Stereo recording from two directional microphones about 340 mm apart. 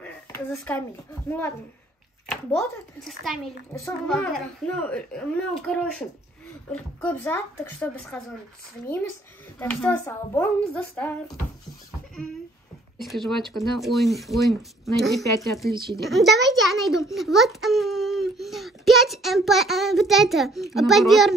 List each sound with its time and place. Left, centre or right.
0.0 s a sound: centre
2.5 s a child's voice: centre
9.6 s a child's voice: centre
13.0 s a child's voice: centre